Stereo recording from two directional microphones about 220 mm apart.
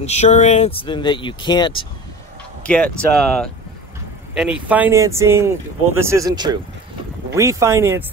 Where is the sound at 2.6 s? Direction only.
5° left (ahead or behind).